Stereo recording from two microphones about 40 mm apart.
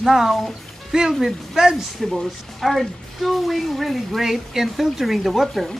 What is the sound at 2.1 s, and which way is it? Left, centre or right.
A woman's voice, centre.